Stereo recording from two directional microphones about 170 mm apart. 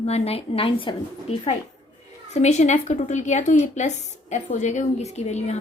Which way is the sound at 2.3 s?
40° left (ahead or behind).